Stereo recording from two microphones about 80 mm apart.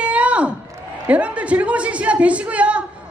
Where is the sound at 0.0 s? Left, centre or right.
Centre.